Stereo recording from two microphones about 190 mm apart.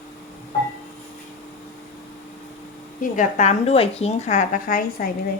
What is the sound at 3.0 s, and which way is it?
A woman's voice, 40° left (ahead or behind).